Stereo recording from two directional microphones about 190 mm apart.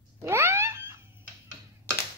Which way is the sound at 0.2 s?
15° right (ahead or behind).